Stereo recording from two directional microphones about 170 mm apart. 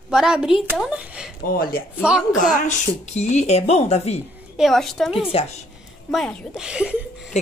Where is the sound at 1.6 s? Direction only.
60° left (ahead or behind).